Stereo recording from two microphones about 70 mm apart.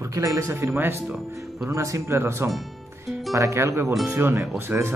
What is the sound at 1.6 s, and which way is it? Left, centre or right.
Speech, right.